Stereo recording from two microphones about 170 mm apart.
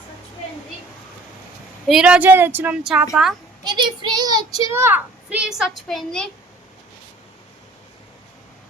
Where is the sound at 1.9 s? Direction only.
5° right (ahead or behind).